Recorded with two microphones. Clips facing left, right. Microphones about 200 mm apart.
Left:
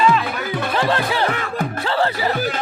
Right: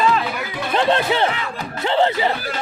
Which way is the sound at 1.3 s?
50° left (ahead or behind).